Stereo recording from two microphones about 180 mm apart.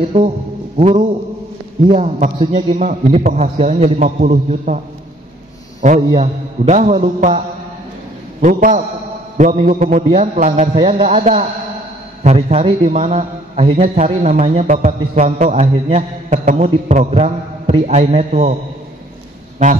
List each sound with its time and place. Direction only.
0.7 s a man's voice: 40° right (ahead or behind)
2.5 s mantra: 45° right (ahead or behind)
3.0 s a man's voice: 35° right (ahead or behind)
5.9 s a man's voice: 25° right (ahead or behind)
6.6 s a man's voice: 40° right (ahead or behind)
7.2 s mantra: 45° right (ahead or behind)
10.2 s a man's voice: 45° right (ahead or behind)